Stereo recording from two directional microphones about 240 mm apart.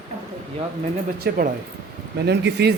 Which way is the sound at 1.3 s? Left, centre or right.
Right.